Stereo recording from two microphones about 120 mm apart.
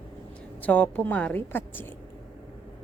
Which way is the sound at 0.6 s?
10° left (ahead or behind).